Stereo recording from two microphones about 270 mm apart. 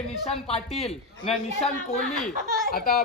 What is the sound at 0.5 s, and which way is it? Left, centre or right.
Speech, left.